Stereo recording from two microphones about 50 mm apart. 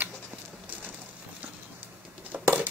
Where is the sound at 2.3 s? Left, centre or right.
Right.